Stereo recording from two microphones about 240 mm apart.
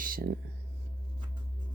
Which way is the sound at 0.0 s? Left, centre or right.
Right.